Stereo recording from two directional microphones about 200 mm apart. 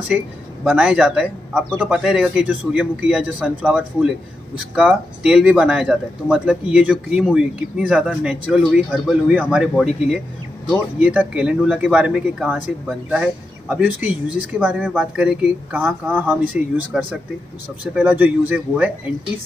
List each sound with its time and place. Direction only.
0.1 s speech: 5° right (ahead or behind)